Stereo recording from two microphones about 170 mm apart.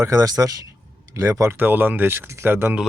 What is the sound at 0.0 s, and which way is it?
Speech, 20° right (ahead or behind).